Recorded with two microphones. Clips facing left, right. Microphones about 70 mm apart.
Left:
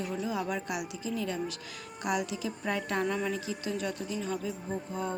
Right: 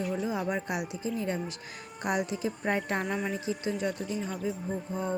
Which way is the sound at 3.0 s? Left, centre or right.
Centre.